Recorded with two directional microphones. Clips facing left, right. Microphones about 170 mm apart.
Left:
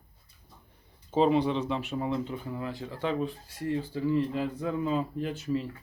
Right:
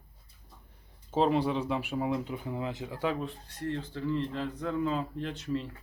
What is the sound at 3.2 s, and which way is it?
Speech, 5° left (ahead or behind).